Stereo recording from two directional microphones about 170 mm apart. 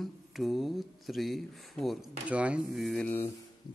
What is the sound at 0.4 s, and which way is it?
Speech, centre (ahead or behind).